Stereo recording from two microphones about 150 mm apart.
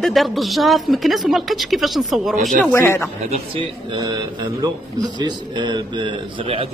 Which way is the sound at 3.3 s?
35° right (ahead or behind).